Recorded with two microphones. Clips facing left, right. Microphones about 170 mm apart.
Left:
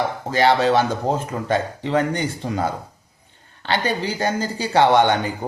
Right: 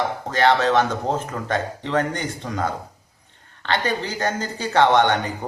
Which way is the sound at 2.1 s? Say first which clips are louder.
Left 3 dB; 30° left (ahead or behind).